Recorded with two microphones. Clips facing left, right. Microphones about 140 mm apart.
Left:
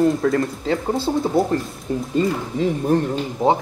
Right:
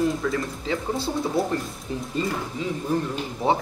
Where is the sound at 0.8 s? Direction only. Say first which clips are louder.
Left 5 dB; 25° left (ahead or behind).